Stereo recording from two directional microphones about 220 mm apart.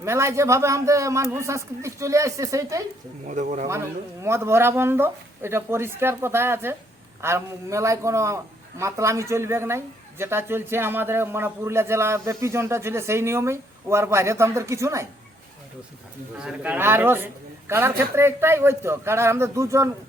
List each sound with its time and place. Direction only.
0.0 s speech: 10° right (ahead or behind)
3.2 s speech: 35° right (ahead or behind)
3.7 s speech: 15° right (ahead or behind)
16.4 s speech: 5° right (ahead or behind)